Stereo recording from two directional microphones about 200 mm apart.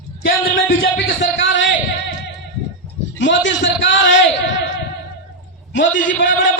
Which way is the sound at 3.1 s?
65° left (ahead or behind).